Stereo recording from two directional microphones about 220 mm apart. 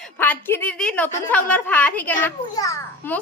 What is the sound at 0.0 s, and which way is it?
A woman's voice, 10° left (ahead or behind).